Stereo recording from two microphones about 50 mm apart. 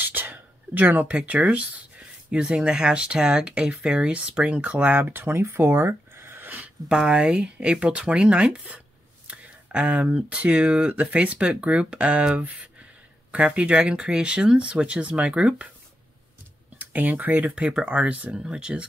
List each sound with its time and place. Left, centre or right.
0.0 s a sound: right
1.0 s speech: right
4.9 s speech: right
5.5 s a sound: right
6.9 s speech: centre
16.7 s speech: right
18.3 s speech: centre